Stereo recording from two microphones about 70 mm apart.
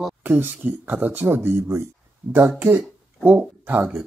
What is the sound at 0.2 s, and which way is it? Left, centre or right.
Speech, right.